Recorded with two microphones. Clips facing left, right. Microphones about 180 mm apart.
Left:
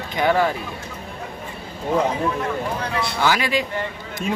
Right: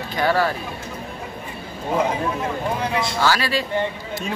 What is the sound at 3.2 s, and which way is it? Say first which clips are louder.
Speech: left 2 dB; 15° left (ahead or behind).